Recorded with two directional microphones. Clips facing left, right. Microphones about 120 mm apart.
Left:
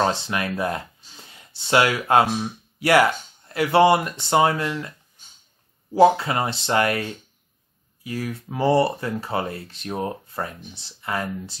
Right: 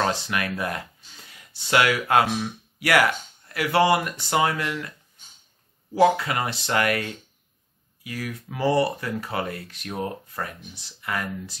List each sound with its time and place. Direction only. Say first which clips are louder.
0.0 s speech: left 2 dB; 25° left (ahead or behind)
5.9 s speech: left 3 dB; 30° left (ahead or behind)